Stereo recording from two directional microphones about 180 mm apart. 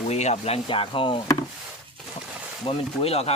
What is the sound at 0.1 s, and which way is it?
Speech, 35° left (ahead or behind).